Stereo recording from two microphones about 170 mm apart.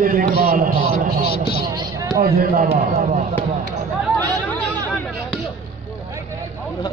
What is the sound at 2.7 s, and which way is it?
Speech, 35° right (ahead or behind).